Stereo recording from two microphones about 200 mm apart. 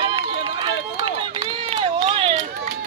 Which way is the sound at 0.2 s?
20° right (ahead or behind).